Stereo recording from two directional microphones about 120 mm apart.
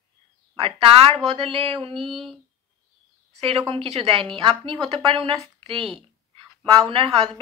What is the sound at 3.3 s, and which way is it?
A woman's voice, 55° right (ahead or behind).